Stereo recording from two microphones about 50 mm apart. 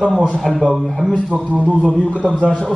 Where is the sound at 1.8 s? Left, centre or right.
Centre.